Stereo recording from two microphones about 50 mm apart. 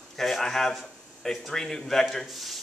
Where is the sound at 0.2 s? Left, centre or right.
Centre.